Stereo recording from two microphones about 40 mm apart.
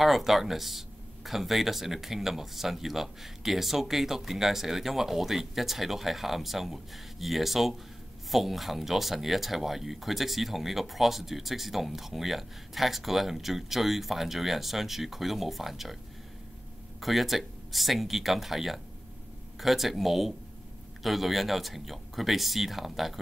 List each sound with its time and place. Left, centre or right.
0.0 s speech: centre
17.0 s speech: centre